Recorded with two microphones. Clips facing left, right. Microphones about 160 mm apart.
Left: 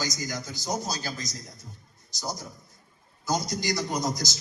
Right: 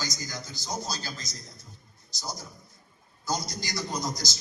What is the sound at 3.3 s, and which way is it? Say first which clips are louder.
A man's voice: left 5 dB; 20° left (ahead or behind).